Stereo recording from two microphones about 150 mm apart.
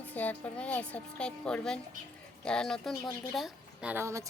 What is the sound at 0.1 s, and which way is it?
A woman's voice, 10° left (ahead or behind).